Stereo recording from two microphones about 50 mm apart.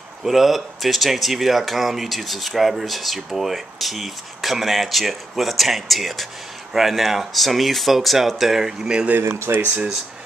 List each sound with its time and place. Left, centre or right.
0.2 s speech: centre
9.5 s speech: right